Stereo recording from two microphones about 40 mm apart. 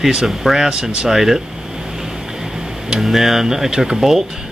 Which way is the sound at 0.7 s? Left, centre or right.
Right.